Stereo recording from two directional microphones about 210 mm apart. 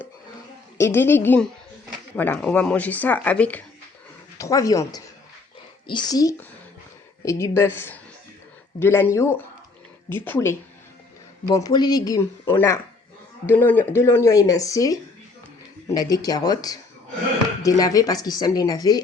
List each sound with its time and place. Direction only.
0.8 s speech: 10° left (ahead or behind)
16.0 s speech: 20° left (ahead or behind)